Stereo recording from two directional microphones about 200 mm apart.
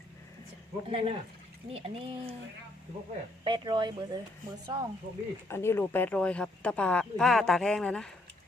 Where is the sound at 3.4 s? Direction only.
25° right (ahead or behind).